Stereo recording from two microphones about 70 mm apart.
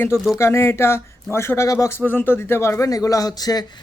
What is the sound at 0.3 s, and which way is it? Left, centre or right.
Speech, left.